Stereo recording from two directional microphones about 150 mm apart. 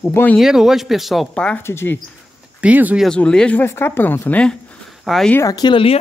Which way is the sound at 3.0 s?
5° left (ahead or behind).